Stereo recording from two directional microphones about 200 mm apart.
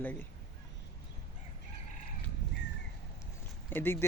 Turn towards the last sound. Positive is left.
turn(degrees=10)  # may be behind; listen again after turning